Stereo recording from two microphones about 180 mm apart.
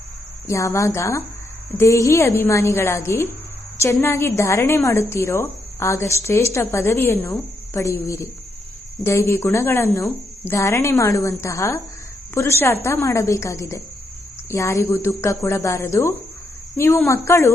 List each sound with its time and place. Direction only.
0.4 s a woman's voice: 15° left (ahead or behind)